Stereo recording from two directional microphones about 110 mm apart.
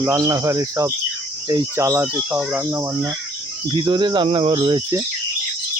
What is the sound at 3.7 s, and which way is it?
Speech, 40° right (ahead or behind).